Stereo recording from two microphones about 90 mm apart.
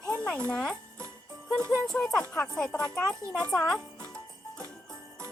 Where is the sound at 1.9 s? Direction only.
5° left (ahead or behind).